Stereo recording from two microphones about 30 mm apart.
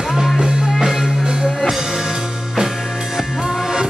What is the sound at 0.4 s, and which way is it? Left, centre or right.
Music, right.